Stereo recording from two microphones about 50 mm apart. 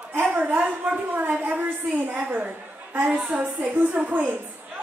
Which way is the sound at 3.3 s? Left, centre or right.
Right.